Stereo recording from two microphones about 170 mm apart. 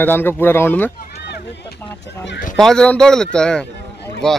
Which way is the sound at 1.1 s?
75° left (ahead or behind).